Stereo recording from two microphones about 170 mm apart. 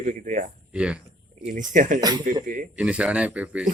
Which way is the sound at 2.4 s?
50° right (ahead or behind).